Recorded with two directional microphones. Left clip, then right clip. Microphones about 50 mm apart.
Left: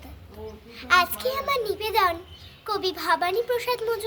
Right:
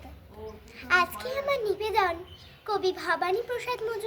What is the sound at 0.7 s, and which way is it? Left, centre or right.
Speech, centre.